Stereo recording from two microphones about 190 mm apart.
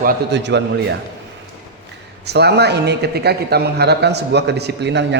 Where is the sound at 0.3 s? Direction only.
65° right (ahead or behind).